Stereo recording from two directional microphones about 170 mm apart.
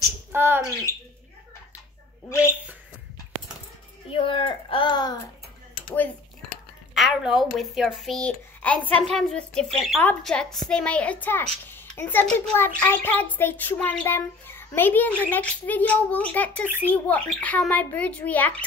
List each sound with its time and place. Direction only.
0.3 s speech: 15° right (ahead or behind)
2.2 s a child's voice: 15° left (ahead or behind)
4.1 s speech: 30° left (ahead or behind)
6.9 s a woman's voice: centre (ahead or behind)